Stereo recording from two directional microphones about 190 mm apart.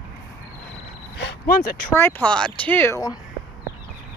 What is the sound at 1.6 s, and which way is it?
Speech, 50° left (ahead or behind).